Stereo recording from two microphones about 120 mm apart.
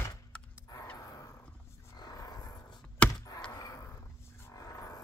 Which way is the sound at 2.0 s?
30° left (ahead or behind).